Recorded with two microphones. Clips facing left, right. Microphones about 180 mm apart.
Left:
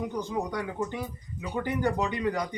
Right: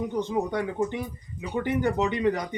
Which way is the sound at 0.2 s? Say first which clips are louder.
Right 7 dB; 25° right (ahead or behind).